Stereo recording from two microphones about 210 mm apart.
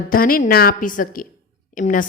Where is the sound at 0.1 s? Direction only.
40° left (ahead or behind).